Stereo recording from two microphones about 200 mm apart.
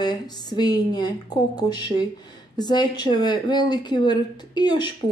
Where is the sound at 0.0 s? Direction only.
20° left (ahead or behind).